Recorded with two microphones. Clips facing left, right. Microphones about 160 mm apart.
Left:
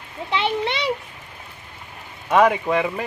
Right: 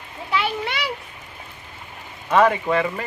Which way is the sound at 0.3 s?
25° left (ahead or behind).